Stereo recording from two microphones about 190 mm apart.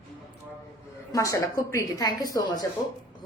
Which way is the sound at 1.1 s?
15° left (ahead or behind).